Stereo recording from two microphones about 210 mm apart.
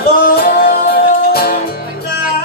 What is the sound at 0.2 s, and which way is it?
Music, 45° left (ahead or behind).